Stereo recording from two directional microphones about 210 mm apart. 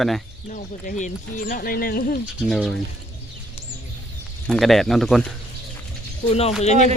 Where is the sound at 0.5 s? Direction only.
35° left (ahead or behind).